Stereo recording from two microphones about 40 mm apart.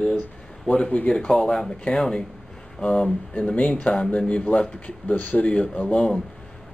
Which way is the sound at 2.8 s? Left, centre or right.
Left.